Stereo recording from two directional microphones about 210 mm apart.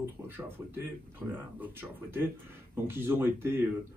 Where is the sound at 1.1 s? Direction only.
10° right (ahead or behind).